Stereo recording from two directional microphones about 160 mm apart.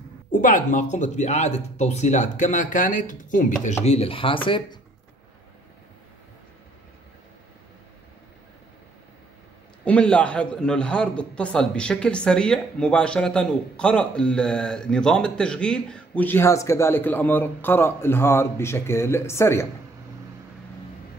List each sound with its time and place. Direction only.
0.3 s speech: 55° left (ahead or behind)
3.8 s speech: 40° left (ahead or behind)
9.8 s a man's voice: 5° left (ahead or behind)